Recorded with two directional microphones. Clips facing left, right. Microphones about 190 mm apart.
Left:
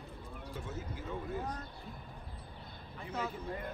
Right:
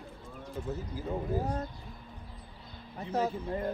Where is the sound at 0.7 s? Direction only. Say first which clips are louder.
Right 7 dB; 35° right (ahead or behind).